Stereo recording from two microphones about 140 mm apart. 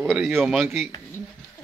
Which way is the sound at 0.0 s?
Centre (ahead or behind).